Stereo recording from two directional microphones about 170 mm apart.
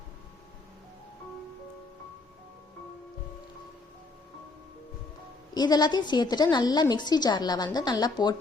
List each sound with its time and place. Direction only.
5.5 s a woman's voice: 25° left (ahead or behind)